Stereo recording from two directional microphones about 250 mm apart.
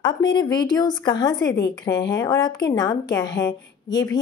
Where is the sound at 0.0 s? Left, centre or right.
Centre.